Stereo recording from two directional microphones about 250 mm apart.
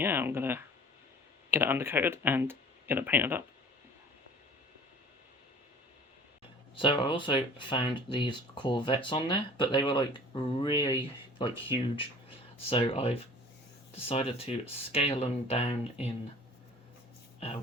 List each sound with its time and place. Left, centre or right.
0.0 s speech: centre
6.7 s speech: left